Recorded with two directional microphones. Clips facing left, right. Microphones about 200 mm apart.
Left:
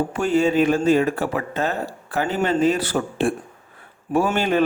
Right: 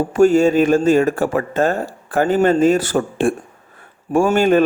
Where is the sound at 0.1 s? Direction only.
45° right (ahead or behind).